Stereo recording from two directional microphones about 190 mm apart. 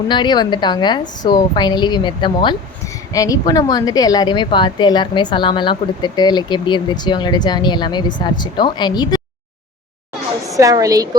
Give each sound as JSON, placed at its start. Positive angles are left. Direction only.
{"t": 0.1, "sound": "speech", "side_deg": 25}
{"t": 10.6, "sound": "a woman's voice", "side_deg": -20}